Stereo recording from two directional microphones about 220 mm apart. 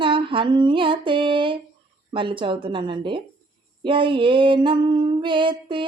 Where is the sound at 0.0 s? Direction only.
25° right (ahead or behind).